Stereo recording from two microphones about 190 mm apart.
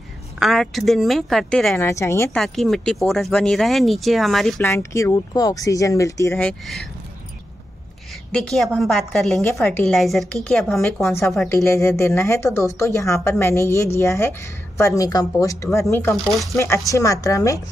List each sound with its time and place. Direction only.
0.4 s a woman's voice: centre (ahead or behind)
1.8 s a woman's voice: 15° left (ahead or behind)
2.3 s a woman's voice: centre (ahead or behind)
4.6 s a woman's voice: 15° left (ahead or behind)
8.3 s a woman's voice: centre (ahead or behind)
16.3 s a woman's voice: centre (ahead or behind)
16.5 s a woman's voice: 15° left (ahead or behind)